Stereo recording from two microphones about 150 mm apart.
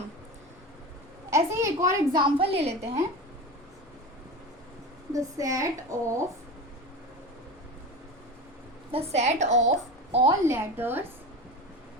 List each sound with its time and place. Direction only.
1.3 s a sound: 20° right (ahead or behind)
2.1 s a woman's voice: 40° right (ahead or behind)
5.1 s a woman's voice: 20° right (ahead or behind)
8.9 s a woman's voice: 45° right (ahead or behind)
10.4 s a woman's voice: 15° right (ahead or behind)